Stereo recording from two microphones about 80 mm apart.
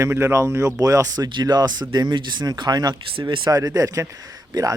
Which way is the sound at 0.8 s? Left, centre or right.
Right.